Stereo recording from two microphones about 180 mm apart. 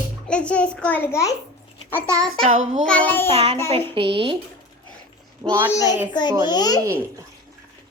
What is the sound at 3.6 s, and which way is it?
Speech, 30° right (ahead or behind).